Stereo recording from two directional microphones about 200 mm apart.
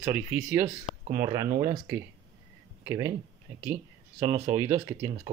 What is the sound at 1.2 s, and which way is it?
Speech, 20° right (ahead or behind).